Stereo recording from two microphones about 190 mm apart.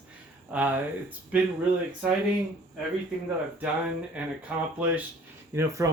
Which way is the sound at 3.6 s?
5° right (ahead or behind).